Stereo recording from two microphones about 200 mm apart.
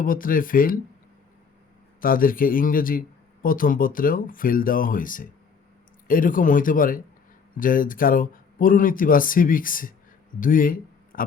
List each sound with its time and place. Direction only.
0.0 s speech: 45° left (ahead or behind)
2.0 s speech: 45° left (ahead or behind)